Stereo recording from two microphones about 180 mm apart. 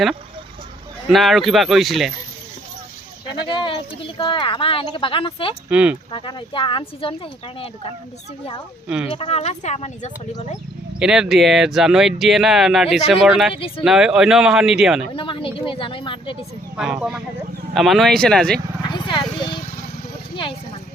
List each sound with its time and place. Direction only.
1.0 s speech: centre (ahead or behind)
3.2 s speech: 25° left (ahead or behind)
5.6 s speech: 5° right (ahead or behind)
6.1 s speech: 25° left (ahead or behind)
9.1 s speech: 35° left (ahead or behind)
11.0 s speech: 5° right (ahead or behind)
13.5 s speech: 30° left (ahead or behind)
13.8 s speech: 5° right (ahead or behind)
15.1 s speech: 30° left (ahead or behind)
16.7 s speech: 5° right (ahead or behind)
18.9 s a sound: 25° left (ahead or behind)